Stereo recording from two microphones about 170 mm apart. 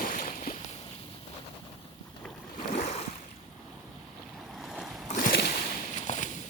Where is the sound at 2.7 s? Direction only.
40° left (ahead or behind).